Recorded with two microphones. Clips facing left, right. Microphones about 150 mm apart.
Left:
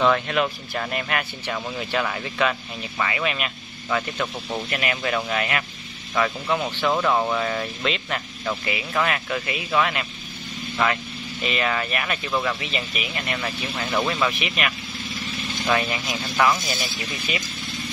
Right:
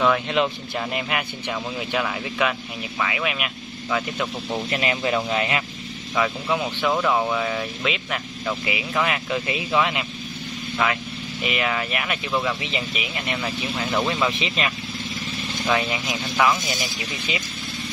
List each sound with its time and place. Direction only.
0.3 s speech: 15° right (ahead or behind)
4.6 s speech: 25° right (ahead or behind)
6.1 s speech: 5° right (ahead or behind)
11.4 s speech: 10° right (ahead or behind)
12.5 s speech: 20° right (ahead or behind)
13.8 s speech: centre (ahead or behind)
14.4 s speech: 25° right (ahead or behind)
16.1 s speech: 5° right (ahead or behind)